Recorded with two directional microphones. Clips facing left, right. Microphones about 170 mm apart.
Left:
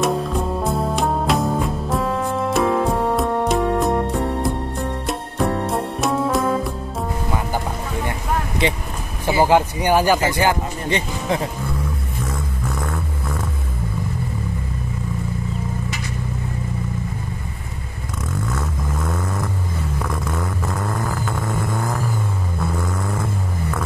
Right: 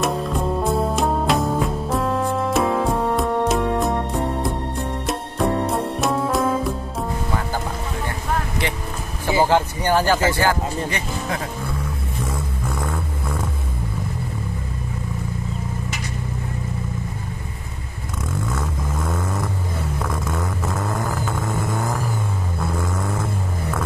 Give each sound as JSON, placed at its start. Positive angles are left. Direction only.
{"t": 0.0, "sound": "music", "side_deg": 0}
{"t": 5.0, "sound": "music", "side_deg": 0}
{"t": 9.4, "sound": "speech", "side_deg": 15}
{"t": 12.3, "sound": "music", "side_deg": -5}
{"t": 18.5, "sound": "vehicle", "side_deg": -5}